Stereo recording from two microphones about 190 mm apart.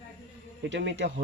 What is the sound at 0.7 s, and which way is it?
Speech, 70° right (ahead or behind).